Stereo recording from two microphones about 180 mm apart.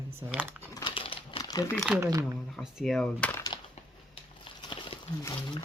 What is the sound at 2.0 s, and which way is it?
Speech, 20° right (ahead or behind).